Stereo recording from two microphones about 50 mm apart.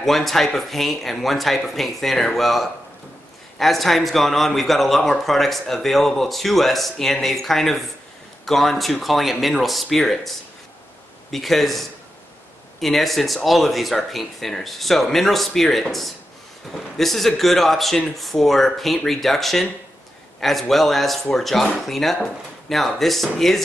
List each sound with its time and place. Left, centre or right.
0.0 s a man's voice: centre
12.8 s a man's voice: centre